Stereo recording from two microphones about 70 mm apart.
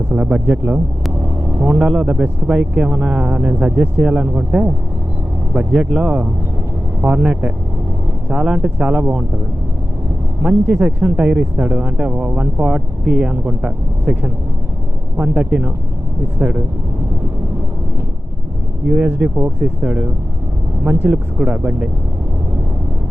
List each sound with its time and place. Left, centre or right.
0.1 s speech: centre
1.2 s vehicle: right
2.0 s speech: right
10.4 s speech: right
18.9 s speech: centre
21.1 s speech: centre